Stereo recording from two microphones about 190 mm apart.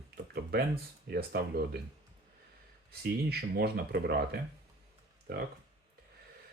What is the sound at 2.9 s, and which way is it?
Speech, 55° right (ahead or behind).